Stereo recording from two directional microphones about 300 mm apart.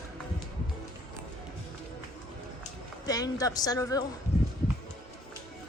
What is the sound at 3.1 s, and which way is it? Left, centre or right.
Speech, centre.